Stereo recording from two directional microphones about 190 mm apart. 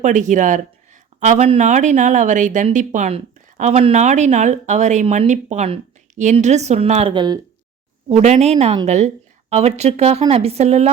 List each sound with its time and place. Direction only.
0.0 s speech: 40° right (ahead or behind)
7.1 s speech: 25° right (ahead or behind)
8.1 s speech: 35° right (ahead or behind)